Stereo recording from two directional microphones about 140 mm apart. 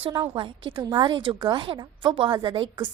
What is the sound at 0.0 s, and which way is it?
A woman's voice, 35° right (ahead or behind).